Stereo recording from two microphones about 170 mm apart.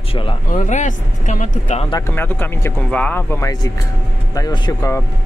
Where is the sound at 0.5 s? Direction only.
50° left (ahead or behind).